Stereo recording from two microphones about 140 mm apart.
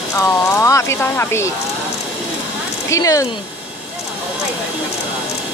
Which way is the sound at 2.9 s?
25° left (ahead or behind).